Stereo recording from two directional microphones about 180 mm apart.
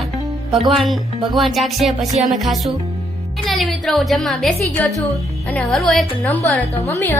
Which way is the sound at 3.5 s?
Centre (ahead or behind).